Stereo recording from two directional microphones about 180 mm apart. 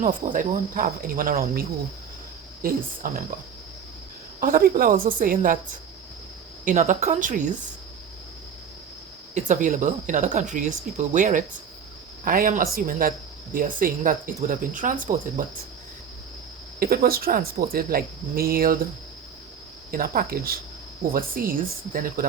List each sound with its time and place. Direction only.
0.0 s speech: 45° right (ahead or behind)
4.4 s speech: 50° right (ahead or behind)
6.7 s speech: 40° right (ahead or behind)
9.3 s speech: 45° right (ahead or behind)
16.8 s speech: 55° right (ahead or behind)
19.9 s speech: 55° right (ahead or behind)